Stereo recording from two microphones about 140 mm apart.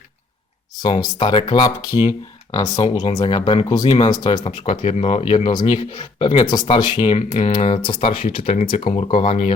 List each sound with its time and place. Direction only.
0.8 s speech: 30° left (ahead or behind)
4.4 s speech: 45° left (ahead or behind)